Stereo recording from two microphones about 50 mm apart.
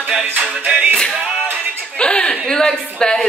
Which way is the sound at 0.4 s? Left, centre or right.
Right.